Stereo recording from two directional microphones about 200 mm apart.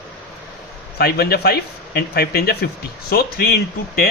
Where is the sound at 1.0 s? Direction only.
50° left (ahead or behind).